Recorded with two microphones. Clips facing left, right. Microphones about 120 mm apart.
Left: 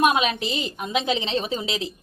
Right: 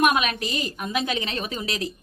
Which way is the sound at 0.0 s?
25° left (ahead or behind).